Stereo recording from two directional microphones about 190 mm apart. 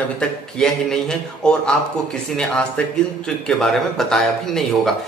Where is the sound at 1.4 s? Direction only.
5° left (ahead or behind).